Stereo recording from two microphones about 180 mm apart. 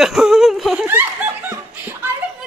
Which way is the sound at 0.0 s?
Centre (ahead or behind).